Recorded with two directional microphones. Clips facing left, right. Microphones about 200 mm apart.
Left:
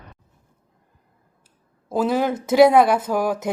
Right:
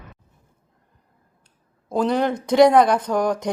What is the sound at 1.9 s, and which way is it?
Speech, 5° left (ahead or behind).